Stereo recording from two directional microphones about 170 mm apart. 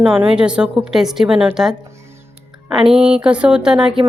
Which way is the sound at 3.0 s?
35° right (ahead or behind).